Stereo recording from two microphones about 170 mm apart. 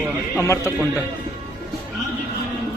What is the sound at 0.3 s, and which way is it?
Speech, 15° left (ahead or behind).